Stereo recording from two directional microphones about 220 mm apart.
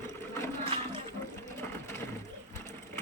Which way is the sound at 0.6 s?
25° right (ahead or behind).